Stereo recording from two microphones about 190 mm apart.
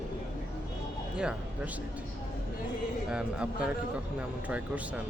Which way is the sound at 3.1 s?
5° right (ahead or behind).